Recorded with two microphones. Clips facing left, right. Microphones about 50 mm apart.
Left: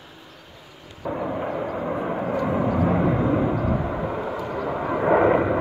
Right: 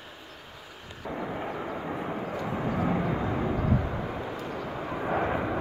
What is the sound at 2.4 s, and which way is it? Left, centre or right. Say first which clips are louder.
Vehicle: left 9 dB; left.